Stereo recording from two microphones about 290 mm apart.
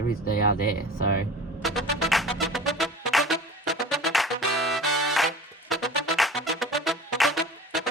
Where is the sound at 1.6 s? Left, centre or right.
Centre.